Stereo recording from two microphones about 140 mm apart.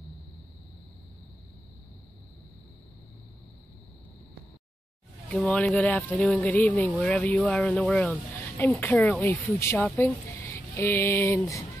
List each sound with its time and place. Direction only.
5.3 s speech: 5° left (ahead or behind); by 11.6 s 20° left (ahead or behind)